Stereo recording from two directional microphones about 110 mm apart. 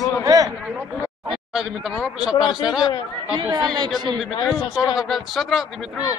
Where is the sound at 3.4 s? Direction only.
40° right (ahead or behind).